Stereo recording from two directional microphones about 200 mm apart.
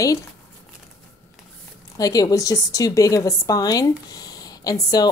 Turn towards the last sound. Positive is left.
turn(degrees=20)  # may be behind; listen again after turning